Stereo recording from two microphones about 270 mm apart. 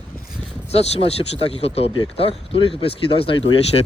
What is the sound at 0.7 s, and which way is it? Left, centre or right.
Speech, left.